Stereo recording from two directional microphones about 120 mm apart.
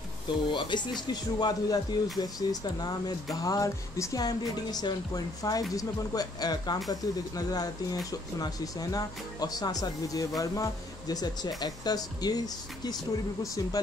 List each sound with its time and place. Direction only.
0.5 s speech: 40° left (ahead or behind)